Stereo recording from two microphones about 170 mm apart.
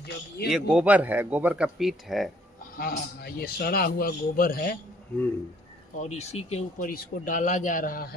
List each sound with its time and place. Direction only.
0.5 s speech: 5° right (ahead or behind)
2.8 s a man's voice: 65° left (ahead or behind)
5.9 s speech: 40° left (ahead or behind); by 8.2 s 60° left (ahead or behind)